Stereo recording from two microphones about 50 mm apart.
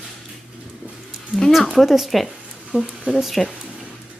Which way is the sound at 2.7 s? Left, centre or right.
Right.